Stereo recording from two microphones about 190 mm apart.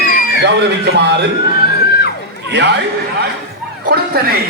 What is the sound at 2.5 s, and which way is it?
Speech, 60° right (ahead or behind).